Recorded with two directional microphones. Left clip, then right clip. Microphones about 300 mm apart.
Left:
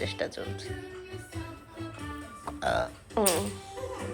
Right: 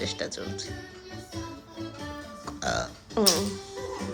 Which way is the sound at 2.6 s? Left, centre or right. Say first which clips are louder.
Left 1 dB; centre.